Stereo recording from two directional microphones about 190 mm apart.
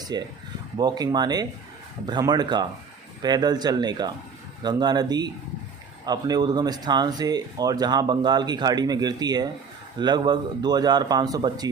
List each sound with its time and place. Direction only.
0.0 s speech: 20° right (ahead or behind)